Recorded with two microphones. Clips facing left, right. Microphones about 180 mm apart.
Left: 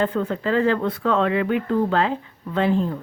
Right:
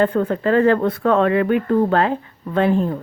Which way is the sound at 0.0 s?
50° right (ahead or behind).